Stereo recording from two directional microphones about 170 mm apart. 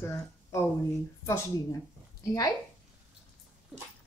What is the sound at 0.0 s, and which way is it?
Speech, 15° left (ahead or behind).